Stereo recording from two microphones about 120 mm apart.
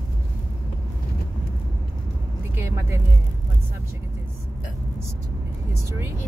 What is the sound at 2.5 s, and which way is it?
Vehicle, 20° right (ahead or behind).